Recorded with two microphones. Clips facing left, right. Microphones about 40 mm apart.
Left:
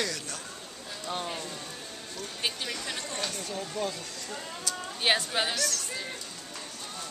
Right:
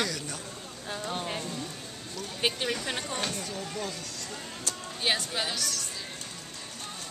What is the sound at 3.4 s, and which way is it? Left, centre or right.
Speech, centre.